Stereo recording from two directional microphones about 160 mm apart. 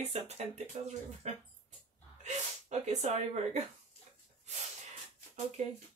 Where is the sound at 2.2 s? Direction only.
45° right (ahead or behind).